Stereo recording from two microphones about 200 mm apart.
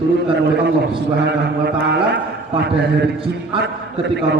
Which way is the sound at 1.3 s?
55° right (ahead or behind).